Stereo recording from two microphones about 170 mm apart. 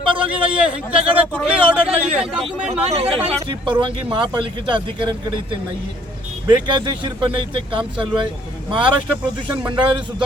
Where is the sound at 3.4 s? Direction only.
30° right (ahead or behind).